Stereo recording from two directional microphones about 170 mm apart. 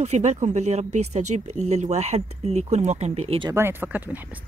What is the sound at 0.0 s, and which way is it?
Speech, 40° right (ahead or behind).